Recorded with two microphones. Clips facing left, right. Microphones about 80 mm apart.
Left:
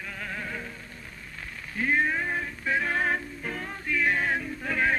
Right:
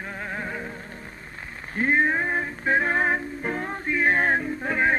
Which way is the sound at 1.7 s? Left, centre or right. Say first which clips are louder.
Right 4 dB; right.